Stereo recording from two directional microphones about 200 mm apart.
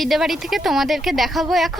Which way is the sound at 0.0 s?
Centre (ahead or behind).